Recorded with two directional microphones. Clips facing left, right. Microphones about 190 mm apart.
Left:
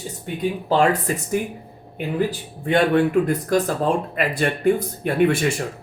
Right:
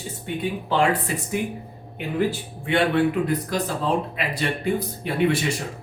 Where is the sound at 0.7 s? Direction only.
45° left (ahead or behind).